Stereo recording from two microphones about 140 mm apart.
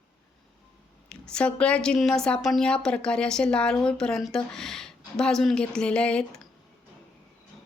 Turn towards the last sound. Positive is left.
turn(degrees=5)  # may be behind; listen again after turning